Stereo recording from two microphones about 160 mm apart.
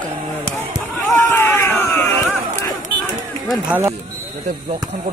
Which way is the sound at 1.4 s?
15° left (ahead or behind).